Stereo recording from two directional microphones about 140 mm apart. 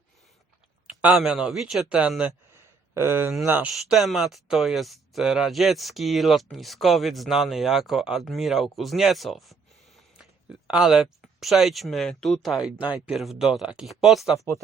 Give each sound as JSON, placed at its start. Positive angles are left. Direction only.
{"t": 1.0, "sound": "speech", "side_deg": -5}
{"t": 3.7, "sound": "speech", "side_deg": 0}
{"t": 14.3, "sound": "speech", "side_deg": 20}